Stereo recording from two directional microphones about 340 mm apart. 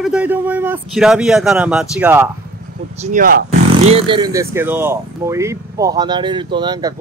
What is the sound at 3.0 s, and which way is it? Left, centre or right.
Speech, right.